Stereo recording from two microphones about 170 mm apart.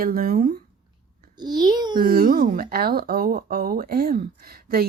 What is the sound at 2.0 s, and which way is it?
A woman's voice, 60° right (ahead or behind).